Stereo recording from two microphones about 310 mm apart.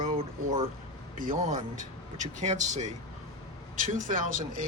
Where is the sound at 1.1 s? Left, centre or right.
Right.